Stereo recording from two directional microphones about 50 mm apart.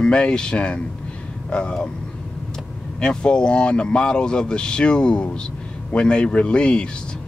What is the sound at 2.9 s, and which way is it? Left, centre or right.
Speech, centre.